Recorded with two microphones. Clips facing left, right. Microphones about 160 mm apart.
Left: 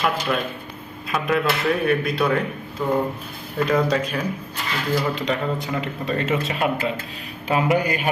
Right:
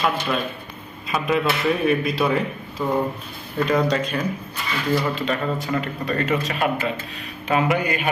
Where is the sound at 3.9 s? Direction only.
5° left (ahead or behind).